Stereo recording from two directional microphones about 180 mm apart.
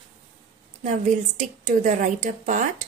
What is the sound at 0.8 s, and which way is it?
A woman's voice, 45° right (ahead or behind).